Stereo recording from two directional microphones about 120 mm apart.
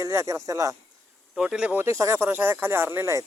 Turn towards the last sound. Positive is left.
turn(degrees=-25)  # may be behind; listen again after turning